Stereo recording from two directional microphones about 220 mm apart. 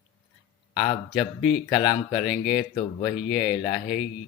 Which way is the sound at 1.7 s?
20° left (ahead or behind).